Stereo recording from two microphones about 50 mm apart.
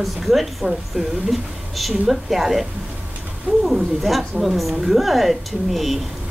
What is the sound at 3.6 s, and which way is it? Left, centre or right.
A woman's voice, centre.